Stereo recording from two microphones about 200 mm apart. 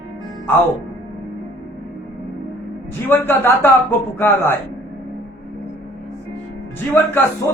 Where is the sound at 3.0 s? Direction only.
10° left (ahead or behind).